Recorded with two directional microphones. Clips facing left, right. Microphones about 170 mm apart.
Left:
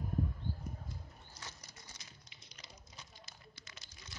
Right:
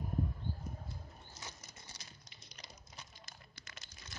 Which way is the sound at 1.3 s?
25° right (ahead or behind).